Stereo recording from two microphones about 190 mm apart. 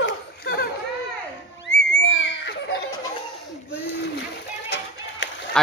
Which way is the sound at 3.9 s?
65° left (ahead or behind).